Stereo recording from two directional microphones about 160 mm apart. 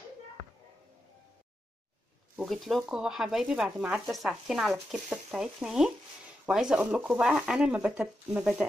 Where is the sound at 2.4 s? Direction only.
Centre (ahead or behind).